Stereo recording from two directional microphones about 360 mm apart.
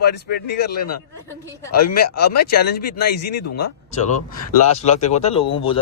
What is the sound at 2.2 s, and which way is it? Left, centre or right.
Speech, left.